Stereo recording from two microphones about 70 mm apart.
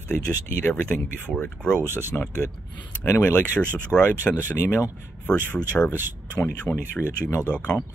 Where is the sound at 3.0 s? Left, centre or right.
Left.